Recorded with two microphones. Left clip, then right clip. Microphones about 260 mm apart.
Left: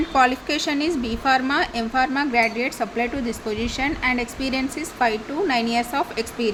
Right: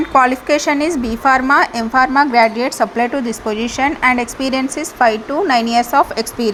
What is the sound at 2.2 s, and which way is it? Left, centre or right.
A woman's voice, centre.